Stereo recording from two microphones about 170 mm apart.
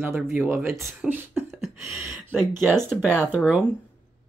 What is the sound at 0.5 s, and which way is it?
Speech, centre (ahead or behind).